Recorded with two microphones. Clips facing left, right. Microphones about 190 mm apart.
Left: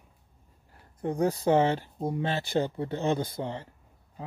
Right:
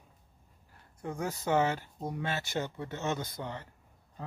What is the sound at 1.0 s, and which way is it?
Speech, 35° left (ahead or behind).